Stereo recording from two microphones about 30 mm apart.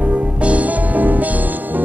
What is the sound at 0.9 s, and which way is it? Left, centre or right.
Music, right.